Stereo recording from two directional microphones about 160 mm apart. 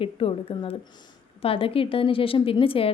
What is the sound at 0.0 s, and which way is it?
A woman's voice, 35° left (ahead or behind).